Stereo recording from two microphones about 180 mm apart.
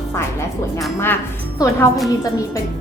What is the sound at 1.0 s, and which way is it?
Speech, 15° left (ahead or behind).